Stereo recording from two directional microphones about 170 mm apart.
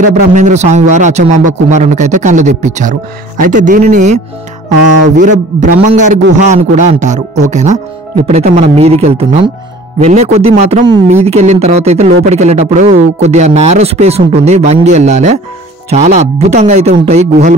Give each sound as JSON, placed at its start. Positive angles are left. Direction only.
{"t": 0.3, "sound": "a man's voice", "side_deg": -45}